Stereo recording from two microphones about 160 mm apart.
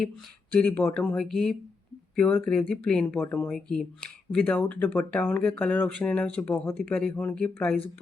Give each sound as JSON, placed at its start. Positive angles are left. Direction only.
{"t": 0.5, "sound": "speech", "side_deg": 10}